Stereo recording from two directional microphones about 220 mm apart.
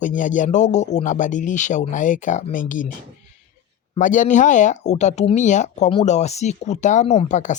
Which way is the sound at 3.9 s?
35° left (ahead or behind).